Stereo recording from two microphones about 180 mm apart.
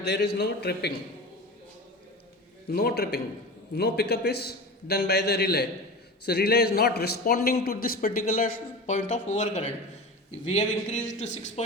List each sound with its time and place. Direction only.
0.0 s a man's voice: 65° left (ahead or behind)
2.6 s a man's voice: 60° left (ahead or behind); by 11.6 s 40° left (ahead or behind)